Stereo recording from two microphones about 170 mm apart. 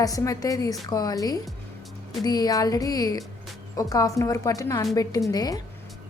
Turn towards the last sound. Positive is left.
turn(degrees=20)  # may be behind; listen again after turning